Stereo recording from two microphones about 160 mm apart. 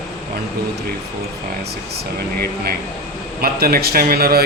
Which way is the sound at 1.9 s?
75° right (ahead or behind).